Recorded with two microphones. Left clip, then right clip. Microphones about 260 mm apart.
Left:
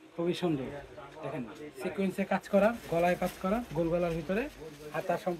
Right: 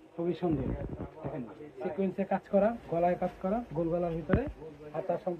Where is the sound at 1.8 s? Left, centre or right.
Centre.